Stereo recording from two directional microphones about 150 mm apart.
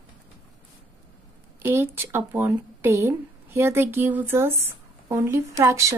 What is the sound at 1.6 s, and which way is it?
Speech, 15° right (ahead or behind).